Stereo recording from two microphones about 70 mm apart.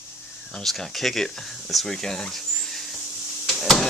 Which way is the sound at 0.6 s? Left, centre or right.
Centre.